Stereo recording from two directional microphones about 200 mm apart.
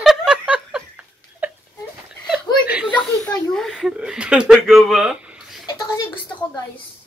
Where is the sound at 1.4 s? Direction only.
10° right (ahead or behind).